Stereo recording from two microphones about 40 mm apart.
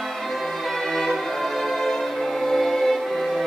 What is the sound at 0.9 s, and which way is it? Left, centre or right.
Music, centre.